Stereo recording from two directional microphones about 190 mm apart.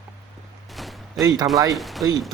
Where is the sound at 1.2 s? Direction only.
20° right (ahead or behind).